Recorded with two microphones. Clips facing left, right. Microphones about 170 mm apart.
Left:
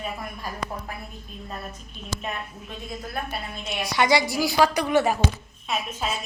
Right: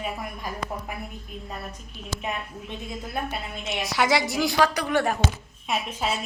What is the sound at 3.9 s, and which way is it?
A woman's voice, 5° right (ahead or behind).